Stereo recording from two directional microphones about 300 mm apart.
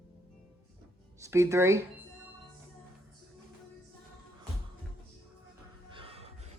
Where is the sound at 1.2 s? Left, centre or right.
Centre.